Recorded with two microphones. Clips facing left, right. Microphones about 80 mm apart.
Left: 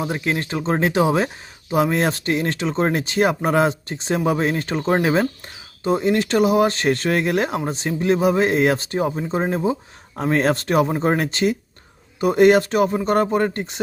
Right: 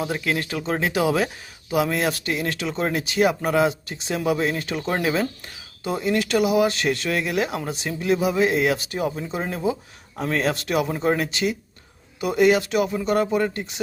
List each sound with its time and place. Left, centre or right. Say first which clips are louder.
0.0 s speech: left 2 dB; left